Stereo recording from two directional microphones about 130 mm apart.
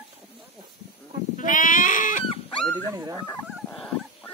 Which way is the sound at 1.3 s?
90° left.